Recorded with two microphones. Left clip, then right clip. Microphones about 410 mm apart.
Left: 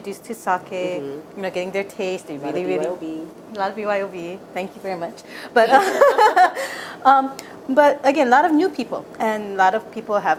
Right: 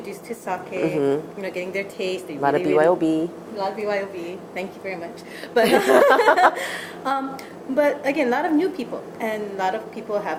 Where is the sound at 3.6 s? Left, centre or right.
Left.